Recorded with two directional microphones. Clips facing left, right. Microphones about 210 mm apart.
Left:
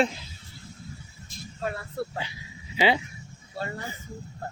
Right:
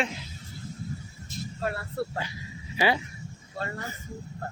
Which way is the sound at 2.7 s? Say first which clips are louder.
Left 2 dB; 20° left (ahead or behind).